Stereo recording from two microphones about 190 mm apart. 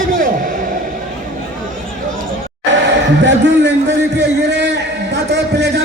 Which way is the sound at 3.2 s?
70° right (ahead or behind).